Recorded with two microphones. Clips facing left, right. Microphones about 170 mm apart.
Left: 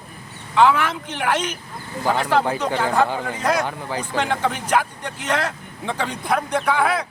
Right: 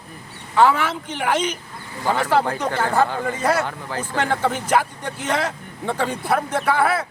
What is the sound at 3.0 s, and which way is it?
Speech, 10° left (ahead or behind).